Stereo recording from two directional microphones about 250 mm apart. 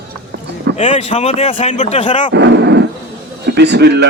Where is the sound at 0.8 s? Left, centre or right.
Left.